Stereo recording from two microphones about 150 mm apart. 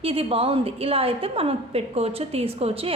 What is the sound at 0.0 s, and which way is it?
A woman's voice, 40° right (ahead or behind).